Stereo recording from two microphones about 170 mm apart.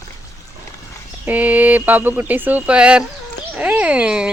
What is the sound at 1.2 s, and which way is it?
Speech, 10° right (ahead or behind).